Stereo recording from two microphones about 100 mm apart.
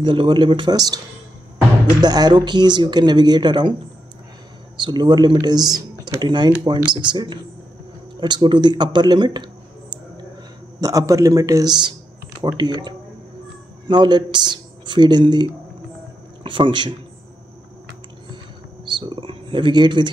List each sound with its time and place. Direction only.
0.0 s speech: 55° right (ahead or behind)
4.7 s speech: 50° right (ahead or behind)
10.8 s a man's voice: 35° right (ahead or behind)
12.5 s speech: 45° right (ahead or behind)
16.4 s speech: 55° right (ahead or behind)
18.9 s speech: 55° right (ahead or behind)